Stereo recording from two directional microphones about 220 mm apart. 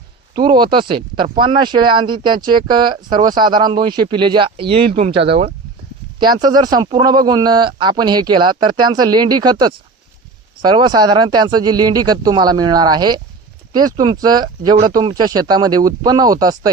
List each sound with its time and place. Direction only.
0.3 s speech: 20° right (ahead or behind)